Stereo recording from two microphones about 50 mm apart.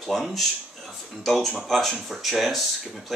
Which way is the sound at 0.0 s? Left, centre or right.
Centre.